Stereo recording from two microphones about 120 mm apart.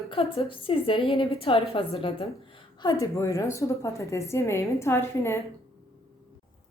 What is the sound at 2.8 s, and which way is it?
A woman's voice, 35° left (ahead or behind).